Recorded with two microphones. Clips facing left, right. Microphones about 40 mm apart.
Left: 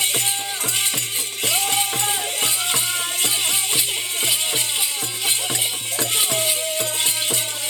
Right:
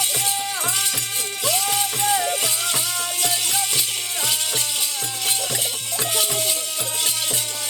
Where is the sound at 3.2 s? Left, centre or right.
Left.